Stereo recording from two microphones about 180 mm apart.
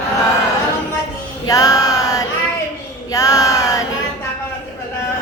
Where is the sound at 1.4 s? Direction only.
20° left (ahead or behind).